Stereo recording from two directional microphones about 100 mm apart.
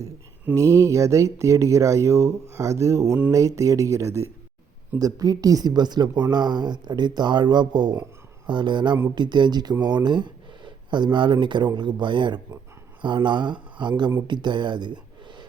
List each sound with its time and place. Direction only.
0.5 s speech: 30° right (ahead or behind); by 15.4 s 50° right (ahead or behind)